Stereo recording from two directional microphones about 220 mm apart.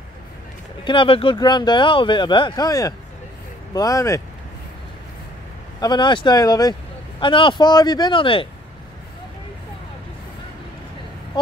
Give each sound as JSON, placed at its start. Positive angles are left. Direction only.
{"t": 0.8, "sound": "speech", "side_deg": 25}
{"t": 5.8, "sound": "speech", "side_deg": 20}